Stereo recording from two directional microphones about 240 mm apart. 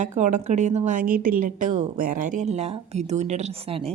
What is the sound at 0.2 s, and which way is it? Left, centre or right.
A woman's voice, right.